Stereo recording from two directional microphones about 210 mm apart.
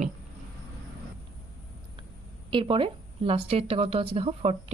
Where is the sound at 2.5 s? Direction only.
25° right (ahead or behind).